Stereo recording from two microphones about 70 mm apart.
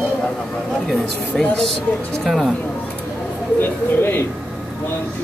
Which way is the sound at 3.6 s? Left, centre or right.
Left.